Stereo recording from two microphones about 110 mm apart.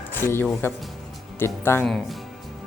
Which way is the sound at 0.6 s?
20° left (ahead or behind).